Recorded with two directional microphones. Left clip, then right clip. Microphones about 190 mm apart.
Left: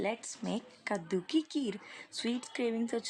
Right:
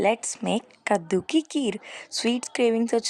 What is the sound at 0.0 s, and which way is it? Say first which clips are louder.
A woman's voice: right 13 dB; 50° right (ahead or behind).